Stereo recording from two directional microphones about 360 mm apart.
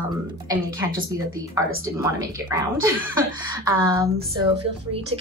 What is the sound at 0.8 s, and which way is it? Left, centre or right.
Speech, centre.